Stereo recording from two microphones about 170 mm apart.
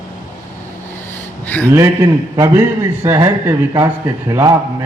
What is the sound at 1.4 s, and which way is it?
Speech, 10° left (ahead or behind).